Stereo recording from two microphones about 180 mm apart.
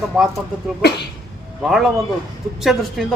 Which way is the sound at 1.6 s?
Centre (ahead or behind).